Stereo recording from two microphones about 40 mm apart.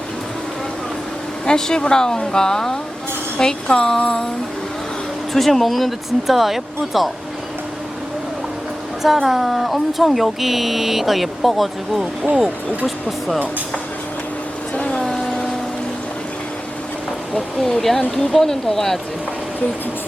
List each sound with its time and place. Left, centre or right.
1.5 s speech: centre
5.3 s speech: centre
9.2 s speech: centre
14.8 s a sound: centre
17.3 s speech: centre